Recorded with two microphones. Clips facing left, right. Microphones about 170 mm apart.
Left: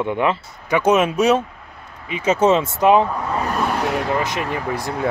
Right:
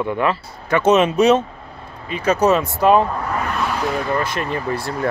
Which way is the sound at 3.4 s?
40° left (ahead or behind).